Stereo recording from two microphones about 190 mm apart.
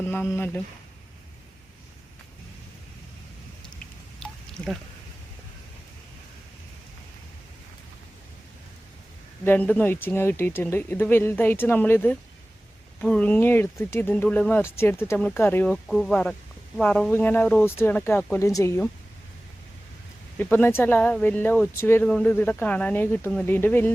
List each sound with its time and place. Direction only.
0.0 s speech: 10° left (ahead or behind)
4.2 s a sound: centre (ahead or behind)
9.4 s speech: 10° left (ahead or behind)
20.4 s speech: 10° left (ahead or behind)